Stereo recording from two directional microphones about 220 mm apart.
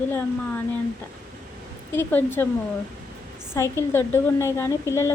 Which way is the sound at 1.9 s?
10° left (ahead or behind).